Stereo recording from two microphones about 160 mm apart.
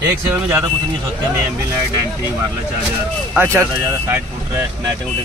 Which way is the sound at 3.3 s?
15° right (ahead or behind).